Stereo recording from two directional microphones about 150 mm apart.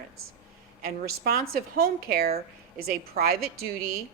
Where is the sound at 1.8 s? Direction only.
80° right.